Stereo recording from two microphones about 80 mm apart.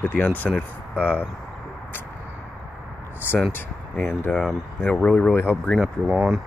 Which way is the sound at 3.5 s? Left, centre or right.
Left.